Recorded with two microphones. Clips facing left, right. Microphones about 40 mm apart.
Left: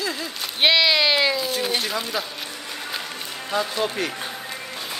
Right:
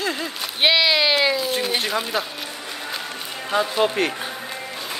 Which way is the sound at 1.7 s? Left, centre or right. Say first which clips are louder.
Right 2 dB; right.